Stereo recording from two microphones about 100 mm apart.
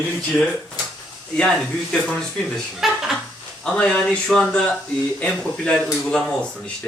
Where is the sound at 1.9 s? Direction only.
5° left (ahead or behind).